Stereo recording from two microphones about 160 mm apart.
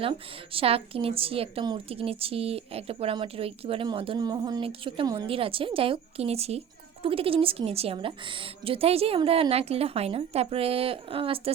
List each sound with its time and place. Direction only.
0.0 s a woman's voice: 35° right (ahead or behind)